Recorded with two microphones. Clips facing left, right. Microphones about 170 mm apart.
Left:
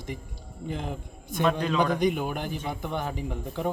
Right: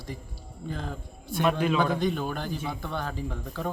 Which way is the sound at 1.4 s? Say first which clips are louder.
Even; 10° right (ahead or behind).